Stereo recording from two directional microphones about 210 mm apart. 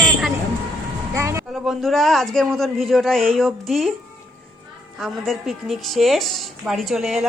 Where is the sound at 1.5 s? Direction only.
Centre (ahead or behind).